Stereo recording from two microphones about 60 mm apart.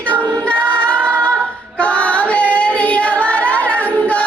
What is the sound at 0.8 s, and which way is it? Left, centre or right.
Singing, left.